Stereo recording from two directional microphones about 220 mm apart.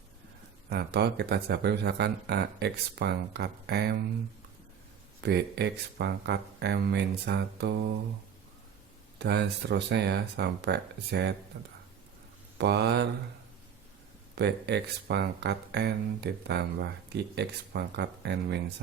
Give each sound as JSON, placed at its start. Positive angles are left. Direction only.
{"t": 0.7, "sound": "speech", "side_deg": -50}
{"t": 5.2, "sound": "speech", "side_deg": -50}
{"t": 9.1, "sound": "speech", "side_deg": -50}
{"t": 12.5, "sound": "speech", "side_deg": -50}
{"t": 14.3, "sound": "speech", "side_deg": -50}